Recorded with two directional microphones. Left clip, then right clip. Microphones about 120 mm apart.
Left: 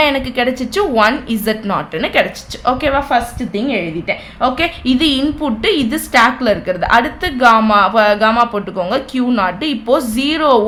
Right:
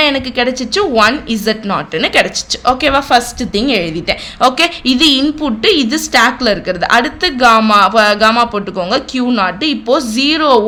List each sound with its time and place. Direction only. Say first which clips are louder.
0.0 s a woman's voice: right 1 dB; 20° right (ahead or behind)
2.9 s a woman's voice: right 4 dB; 60° right (ahead or behind)
4.5 s a woman's voice: right 4 dB; 30° right (ahead or behind)